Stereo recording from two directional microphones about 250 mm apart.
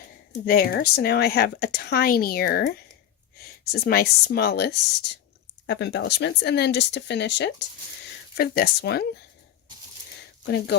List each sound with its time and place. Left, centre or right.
0.4 s speech: left
10.4 s speech: left